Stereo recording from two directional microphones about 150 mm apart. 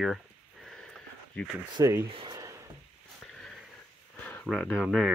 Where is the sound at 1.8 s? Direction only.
20° right (ahead or behind).